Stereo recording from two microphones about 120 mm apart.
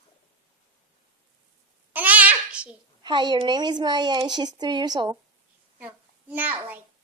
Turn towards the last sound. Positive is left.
turn(degrees=-15)  # may be behind; listen again after turning